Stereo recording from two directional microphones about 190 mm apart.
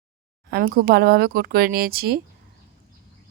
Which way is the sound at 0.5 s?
50° right (ahead or behind).